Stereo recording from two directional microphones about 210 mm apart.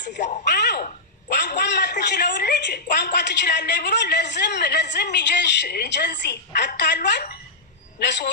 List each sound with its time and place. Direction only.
0.4 s a woman's voice: 50° left (ahead or behind)